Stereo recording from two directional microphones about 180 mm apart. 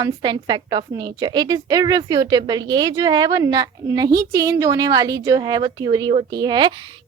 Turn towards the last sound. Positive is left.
turn(degrees=-25)  # may be behind; listen again after turning